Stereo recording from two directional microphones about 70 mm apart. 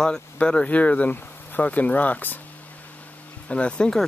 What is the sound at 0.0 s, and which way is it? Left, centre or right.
Speech, centre.